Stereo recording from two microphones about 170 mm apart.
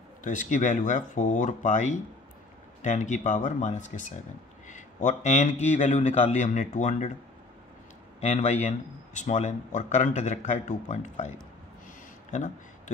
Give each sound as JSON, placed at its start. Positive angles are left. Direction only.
{"t": 0.2, "sound": "speech", "side_deg": 45}
{"t": 8.2, "sound": "speech", "side_deg": 40}
{"t": 12.3, "sound": "a sound", "side_deg": 45}